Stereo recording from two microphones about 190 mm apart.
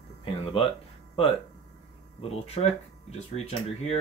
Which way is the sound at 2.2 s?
30° left (ahead or behind).